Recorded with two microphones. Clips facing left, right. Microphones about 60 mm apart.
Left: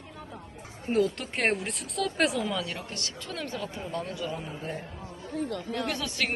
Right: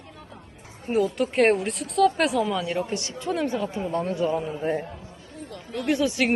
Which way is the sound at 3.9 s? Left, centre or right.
Right.